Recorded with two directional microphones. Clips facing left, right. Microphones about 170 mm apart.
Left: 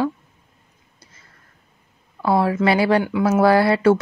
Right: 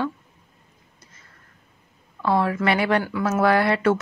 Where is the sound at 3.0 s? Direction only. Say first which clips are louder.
Left 5 dB; 20° left (ahead or behind).